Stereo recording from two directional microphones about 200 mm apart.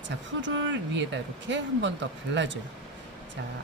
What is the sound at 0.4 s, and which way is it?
Speech, 65° right (ahead or behind).